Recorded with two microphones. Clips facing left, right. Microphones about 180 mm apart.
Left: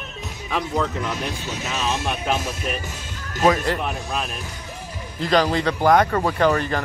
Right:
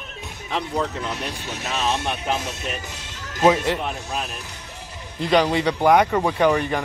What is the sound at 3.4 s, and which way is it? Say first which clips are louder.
Speech: right 1 dB; 10° right (ahead or behind).